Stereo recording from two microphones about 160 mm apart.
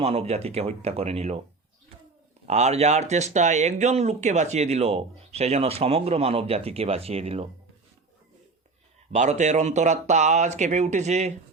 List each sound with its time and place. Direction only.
0.0 s speech: 40° right (ahead or behind)
2.5 s speech: 45° right (ahead or behind)
9.1 s speech: 45° right (ahead or behind)